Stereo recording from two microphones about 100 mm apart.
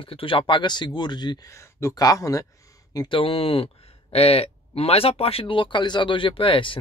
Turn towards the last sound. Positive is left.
turn(degrees=60)  # may be behind; listen again after turning